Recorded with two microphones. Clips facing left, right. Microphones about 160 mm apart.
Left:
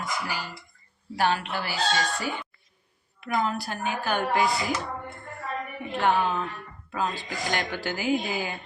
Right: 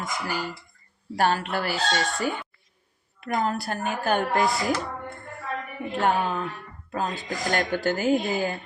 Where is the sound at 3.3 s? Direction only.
45° right (ahead or behind).